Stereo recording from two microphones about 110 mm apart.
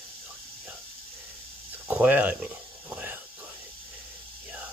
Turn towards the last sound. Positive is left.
turn(degrees=-15)  # may be behind; listen again after turning